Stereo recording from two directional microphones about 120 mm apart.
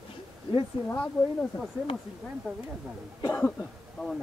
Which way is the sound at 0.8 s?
15° left (ahead or behind).